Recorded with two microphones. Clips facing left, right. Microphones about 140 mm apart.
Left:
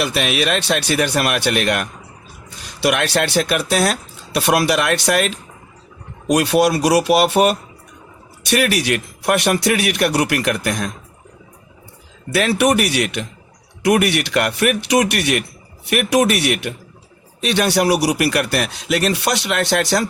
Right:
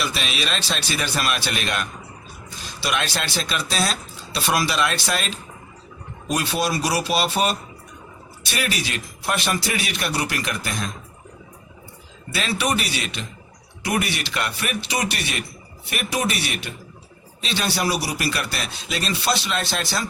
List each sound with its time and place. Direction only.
0.0 s speech: 60° left (ahead or behind)
12.3 s speech: 65° left (ahead or behind)